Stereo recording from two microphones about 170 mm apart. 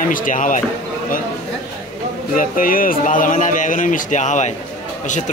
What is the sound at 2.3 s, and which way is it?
Speech, 55° left (ahead or behind).